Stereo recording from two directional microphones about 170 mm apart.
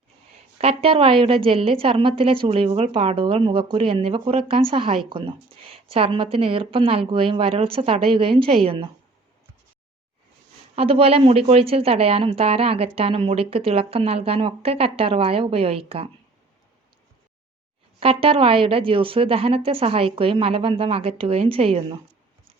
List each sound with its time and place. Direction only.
0.6 s speech: 35° right (ahead or behind)
10.8 s speech: 35° right (ahead or behind)
18.0 s speech: 35° right (ahead or behind)